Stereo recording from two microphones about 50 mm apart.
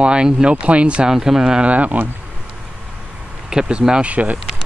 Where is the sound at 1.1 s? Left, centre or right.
Centre.